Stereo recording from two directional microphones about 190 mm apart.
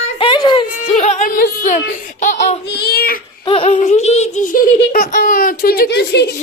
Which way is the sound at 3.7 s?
40° left (ahead or behind).